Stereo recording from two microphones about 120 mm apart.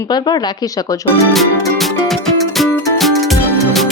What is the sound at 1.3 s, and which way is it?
Music, centre (ahead or behind).